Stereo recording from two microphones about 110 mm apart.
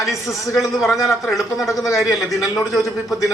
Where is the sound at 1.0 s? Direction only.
25° left (ahead or behind).